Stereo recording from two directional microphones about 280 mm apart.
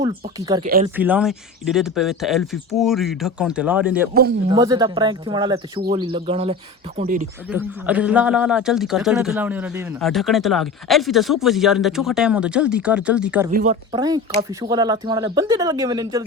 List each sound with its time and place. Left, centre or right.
0.0 s speech: centre
0.6 s speech: right
0.9 s a man's voice: centre; by 7.3 s right
7.5 s a man's voice: centre
13.5 s speech: right
13.9 s speech: centre